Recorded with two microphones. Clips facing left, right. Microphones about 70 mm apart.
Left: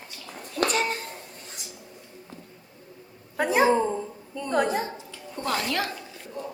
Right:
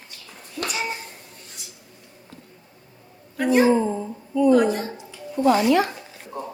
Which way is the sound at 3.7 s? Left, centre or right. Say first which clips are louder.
Right 2 dB; centre.